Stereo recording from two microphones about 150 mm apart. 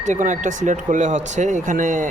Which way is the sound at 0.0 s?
55° right (ahead or behind).